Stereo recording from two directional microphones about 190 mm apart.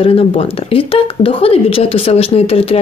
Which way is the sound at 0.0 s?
30° left (ahead or behind).